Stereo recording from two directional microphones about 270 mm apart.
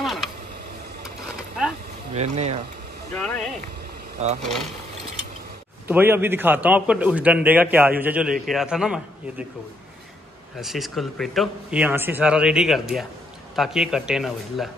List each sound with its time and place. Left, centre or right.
0.0 s a sound: centre
2.1 s speech: right
3.2 s speech: centre
4.2 s speech: right
5.9 s a man's voice: centre
10.6 s speech: centre